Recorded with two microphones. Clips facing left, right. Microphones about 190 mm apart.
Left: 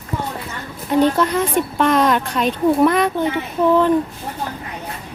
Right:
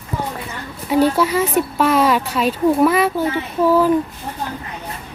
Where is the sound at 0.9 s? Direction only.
10° right (ahead or behind).